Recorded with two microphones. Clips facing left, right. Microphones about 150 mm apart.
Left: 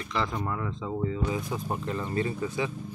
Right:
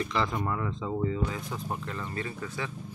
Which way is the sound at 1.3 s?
10° left (ahead or behind).